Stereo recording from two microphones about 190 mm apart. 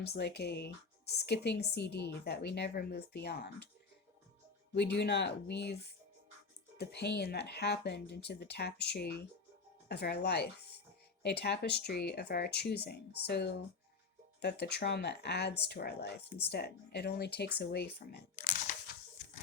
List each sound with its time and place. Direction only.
0.0 s speech: 60° left (ahead or behind)
4.7 s speech: 60° left (ahead or behind); by 18.6 s 45° left (ahead or behind)